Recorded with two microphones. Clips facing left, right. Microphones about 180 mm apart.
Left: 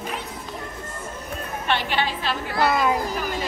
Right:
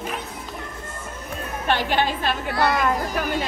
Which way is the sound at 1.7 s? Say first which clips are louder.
Right 3 dB; 45° right (ahead or behind).